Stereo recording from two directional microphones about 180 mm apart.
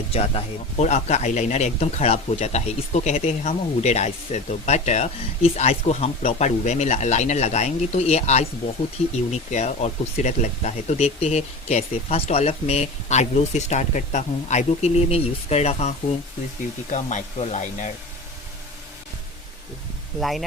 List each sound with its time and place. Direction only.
0.1 s speech: 35° left (ahead or behind)
20.1 s speech: centre (ahead or behind)